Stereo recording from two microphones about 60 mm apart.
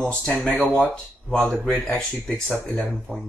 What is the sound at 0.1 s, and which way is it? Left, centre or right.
Speech, centre.